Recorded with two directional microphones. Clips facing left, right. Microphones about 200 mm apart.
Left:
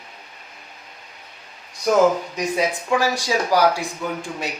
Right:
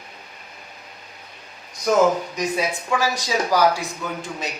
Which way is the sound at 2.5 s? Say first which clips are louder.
Left 5 dB; 15° left (ahead or behind).